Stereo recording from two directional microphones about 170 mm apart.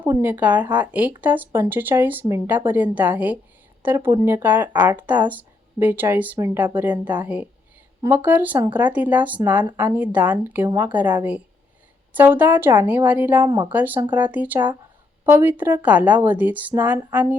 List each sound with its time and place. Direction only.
0.0 s speech: 10° right (ahead or behind)
13.4 s speech: 20° right (ahead or behind)